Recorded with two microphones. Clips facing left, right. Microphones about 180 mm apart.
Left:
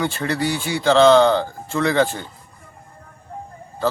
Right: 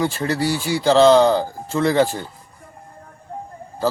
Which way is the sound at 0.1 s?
5° right (ahead or behind).